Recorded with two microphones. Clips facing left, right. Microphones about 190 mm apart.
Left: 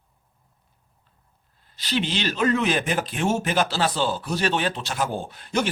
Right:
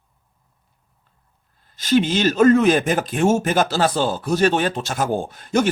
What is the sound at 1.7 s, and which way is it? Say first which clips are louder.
Speech: right 8 dB; 45° right (ahead or behind).